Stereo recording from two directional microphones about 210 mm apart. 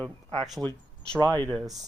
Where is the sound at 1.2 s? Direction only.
20° right (ahead or behind).